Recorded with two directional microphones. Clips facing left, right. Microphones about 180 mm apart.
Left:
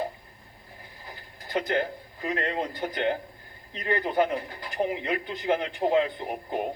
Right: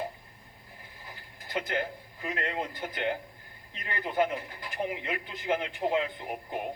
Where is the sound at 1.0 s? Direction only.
35° left (ahead or behind).